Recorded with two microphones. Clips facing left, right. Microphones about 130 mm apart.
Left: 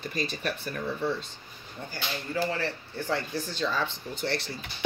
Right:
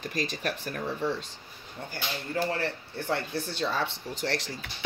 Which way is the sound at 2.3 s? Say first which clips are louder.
Even; 55° right (ahead or behind).